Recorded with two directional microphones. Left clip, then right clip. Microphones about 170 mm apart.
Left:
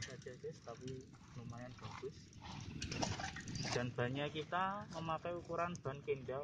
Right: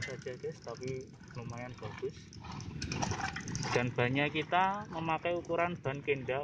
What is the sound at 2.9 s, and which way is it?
Water, 55° left (ahead or behind).